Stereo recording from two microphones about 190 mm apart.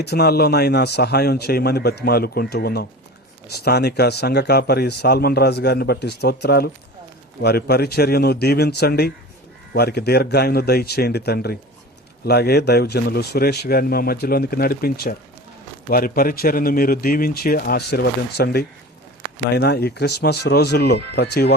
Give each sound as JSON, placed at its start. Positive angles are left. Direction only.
{"t": 0.0, "sound": "speech", "side_deg": 60}